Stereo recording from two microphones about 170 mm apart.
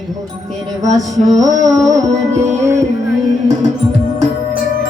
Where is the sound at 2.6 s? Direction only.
15° right (ahead or behind).